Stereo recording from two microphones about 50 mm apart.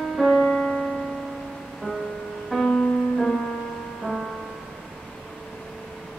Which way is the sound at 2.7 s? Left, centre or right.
Centre.